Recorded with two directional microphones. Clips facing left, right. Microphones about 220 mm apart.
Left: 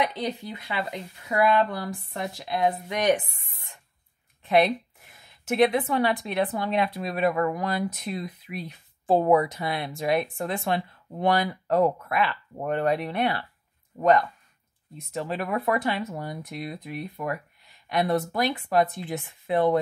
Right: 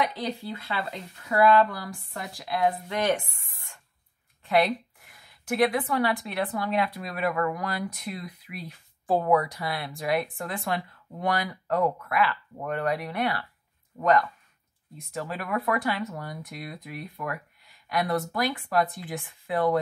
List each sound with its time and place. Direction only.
0.0 s a woman's voice: 20° left (ahead or behind)